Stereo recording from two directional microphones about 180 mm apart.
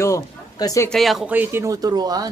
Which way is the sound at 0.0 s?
15° left (ahead or behind).